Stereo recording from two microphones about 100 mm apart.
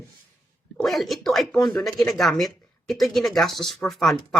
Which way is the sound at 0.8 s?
Centre (ahead or behind).